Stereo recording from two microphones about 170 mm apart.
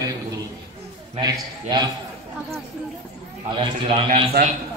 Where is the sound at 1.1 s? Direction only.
25° right (ahead or behind).